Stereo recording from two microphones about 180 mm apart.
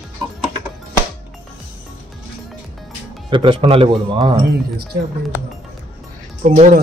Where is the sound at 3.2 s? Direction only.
25° right (ahead or behind).